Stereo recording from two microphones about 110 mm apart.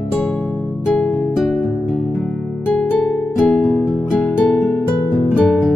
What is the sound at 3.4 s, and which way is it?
Music, 20° left (ahead or behind).